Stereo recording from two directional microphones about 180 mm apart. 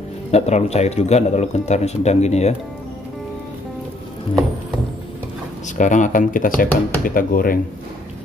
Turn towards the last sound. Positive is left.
turn(degrees=50)  # may be behind; listen again after turning